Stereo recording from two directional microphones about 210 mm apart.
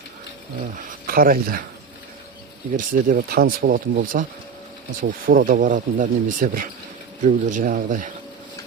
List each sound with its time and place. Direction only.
0.8 s speech: 40° right (ahead or behind)
2.7 s speech: 40° right (ahead or behind)